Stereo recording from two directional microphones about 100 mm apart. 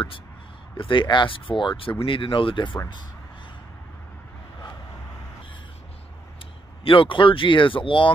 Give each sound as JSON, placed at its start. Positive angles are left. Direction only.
{"t": 0.7, "sound": "speech", "side_deg": 55}
{"t": 6.8, "sound": "speech", "side_deg": 60}